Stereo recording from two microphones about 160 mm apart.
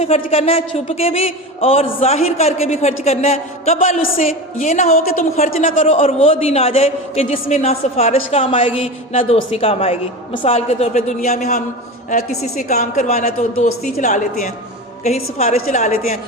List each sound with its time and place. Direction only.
0.0 s a man's voice: 40° left (ahead or behind)
4.9 s a woman's voice: 65° left (ahead or behind)
5.6 s a man's voice: 50° left (ahead or behind)